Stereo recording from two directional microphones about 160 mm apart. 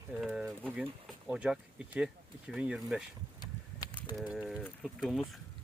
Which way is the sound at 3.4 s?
25° left (ahead or behind).